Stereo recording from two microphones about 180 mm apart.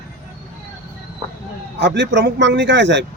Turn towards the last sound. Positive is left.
turn(degrees=-80)